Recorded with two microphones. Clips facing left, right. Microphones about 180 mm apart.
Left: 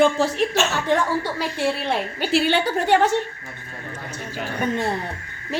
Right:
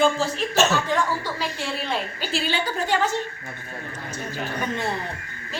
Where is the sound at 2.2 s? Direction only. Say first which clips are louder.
Left 7 dB; 70° left (ahead or behind).